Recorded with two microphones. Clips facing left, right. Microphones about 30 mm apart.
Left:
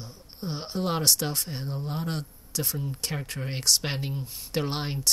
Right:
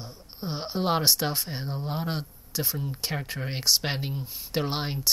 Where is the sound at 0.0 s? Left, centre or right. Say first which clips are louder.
Right 1 dB; centre.